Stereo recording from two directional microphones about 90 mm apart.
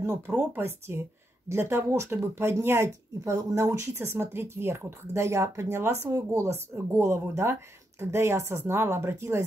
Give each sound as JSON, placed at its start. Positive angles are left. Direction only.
{"t": 0.3, "sound": "speech", "side_deg": -25}